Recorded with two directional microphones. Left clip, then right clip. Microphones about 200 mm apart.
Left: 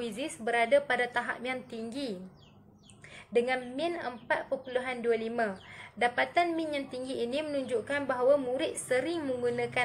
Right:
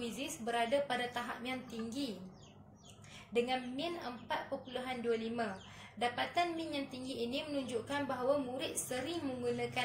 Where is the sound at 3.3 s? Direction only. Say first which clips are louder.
Left 6 dB; 25° left (ahead or behind).